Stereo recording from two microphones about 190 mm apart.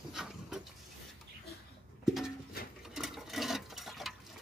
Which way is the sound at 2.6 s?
55° left (ahead or behind).